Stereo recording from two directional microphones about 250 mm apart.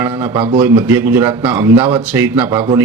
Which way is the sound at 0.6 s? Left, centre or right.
Centre.